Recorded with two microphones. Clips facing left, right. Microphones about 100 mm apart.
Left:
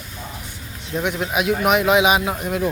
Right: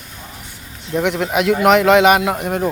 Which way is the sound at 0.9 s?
65° right (ahead or behind).